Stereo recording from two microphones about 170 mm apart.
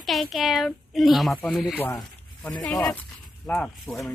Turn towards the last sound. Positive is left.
turn(degrees=5)  # may be behind; listen again after turning